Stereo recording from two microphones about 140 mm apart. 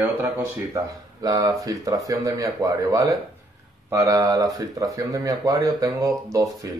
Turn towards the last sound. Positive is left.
turn(degrees=-25)  # may be behind; listen again after turning